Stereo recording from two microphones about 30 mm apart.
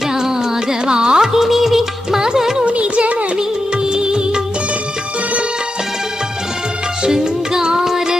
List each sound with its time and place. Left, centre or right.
0.1 s carnatic music: centre
1.2 s music: centre
2.2 s music: centre
2.6 s music: right
3.8 s music: right
7.0 s music: right